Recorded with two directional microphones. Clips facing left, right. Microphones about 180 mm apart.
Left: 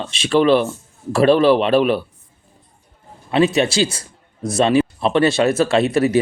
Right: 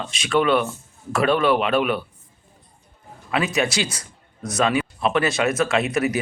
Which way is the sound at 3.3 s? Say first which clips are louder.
Left 6 dB; 30° left (ahead or behind).